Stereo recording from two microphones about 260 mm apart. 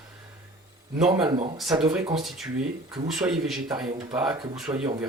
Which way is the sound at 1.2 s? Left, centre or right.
Centre.